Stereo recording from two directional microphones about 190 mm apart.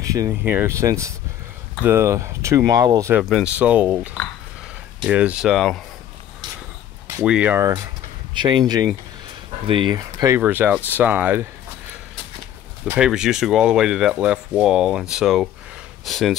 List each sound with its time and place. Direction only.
0.0 s speech: 20° right (ahead or behind); by 5.8 s centre (ahead or behind)
7.1 s speech: 10° right (ahead or behind)
7.6 s speech: 20° right (ahead or behind)
12.8 s speech: 5° right (ahead or behind)